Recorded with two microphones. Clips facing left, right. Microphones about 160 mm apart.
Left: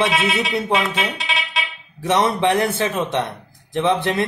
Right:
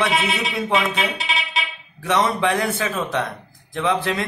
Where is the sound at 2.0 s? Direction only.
25° left (ahead or behind).